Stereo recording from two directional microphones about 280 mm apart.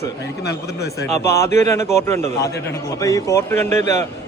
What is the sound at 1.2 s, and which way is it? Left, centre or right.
A man's voice, centre.